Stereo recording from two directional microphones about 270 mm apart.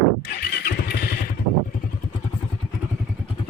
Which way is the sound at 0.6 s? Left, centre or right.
Left.